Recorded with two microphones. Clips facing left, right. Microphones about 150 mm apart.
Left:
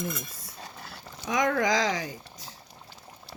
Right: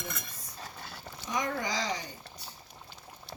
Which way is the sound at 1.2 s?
90° left.